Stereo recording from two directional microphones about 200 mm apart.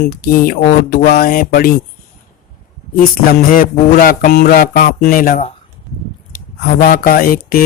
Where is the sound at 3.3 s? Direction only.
45° left (ahead or behind).